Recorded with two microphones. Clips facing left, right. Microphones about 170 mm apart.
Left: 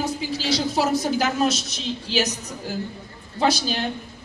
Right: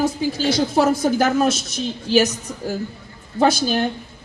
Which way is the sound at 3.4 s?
50° right (ahead or behind).